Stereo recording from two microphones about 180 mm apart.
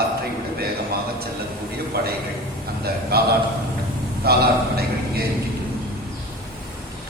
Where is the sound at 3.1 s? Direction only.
60° right (ahead or behind).